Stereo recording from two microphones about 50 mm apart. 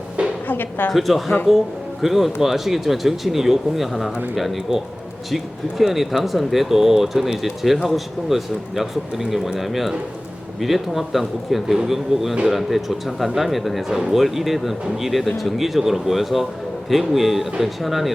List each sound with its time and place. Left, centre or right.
0.4 s music: left
0.9 s speech: centre